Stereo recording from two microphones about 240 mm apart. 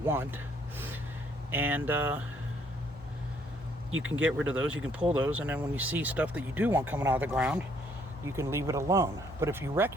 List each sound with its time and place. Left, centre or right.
0.0 s a sound: centre
1.5 s speech: centre
3.9 s speech: right
4.2 s speech: centre